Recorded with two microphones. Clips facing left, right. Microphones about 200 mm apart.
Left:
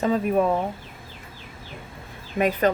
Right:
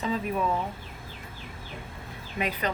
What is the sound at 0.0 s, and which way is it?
Speech, 50° left (ahead or behind).